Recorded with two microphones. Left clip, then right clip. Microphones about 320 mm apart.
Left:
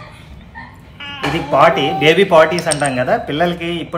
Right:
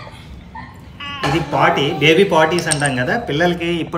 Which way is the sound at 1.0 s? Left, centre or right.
Centre.